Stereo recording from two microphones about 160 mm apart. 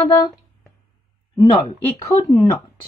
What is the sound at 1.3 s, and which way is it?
Speech, 25° left (ahead or behind).